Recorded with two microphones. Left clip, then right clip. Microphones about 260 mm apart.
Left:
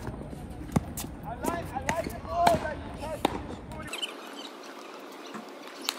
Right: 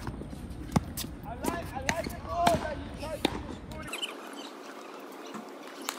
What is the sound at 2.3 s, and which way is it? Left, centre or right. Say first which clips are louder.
Basketball bounce: left 3 dB; left.